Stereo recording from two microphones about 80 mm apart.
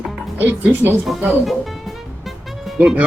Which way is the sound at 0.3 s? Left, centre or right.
Right.